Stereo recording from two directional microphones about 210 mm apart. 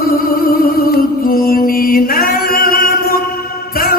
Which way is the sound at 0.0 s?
45° left (ahead or behind).